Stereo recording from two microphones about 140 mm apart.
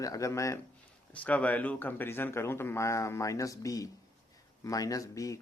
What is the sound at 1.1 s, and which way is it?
A man's voice, 10° left (ahead or behind).